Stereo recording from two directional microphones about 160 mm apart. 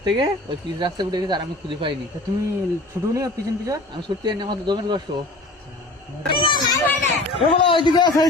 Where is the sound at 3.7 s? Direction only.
30° right (ahead or behind).